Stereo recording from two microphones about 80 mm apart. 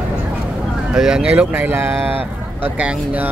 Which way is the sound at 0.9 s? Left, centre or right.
Centre.